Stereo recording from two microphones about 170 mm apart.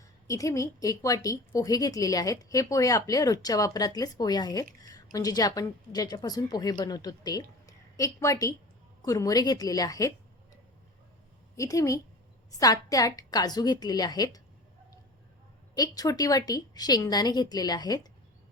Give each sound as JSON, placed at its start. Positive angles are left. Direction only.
{"t": 0.3, "sound": "a woman's voice", "side_deg": 20}
{"t": 11.5, "sound": "a woman's voice", "side_deg": 20}
{"t": 15.7, "sound": "a woman's voice", "side_deg": 20}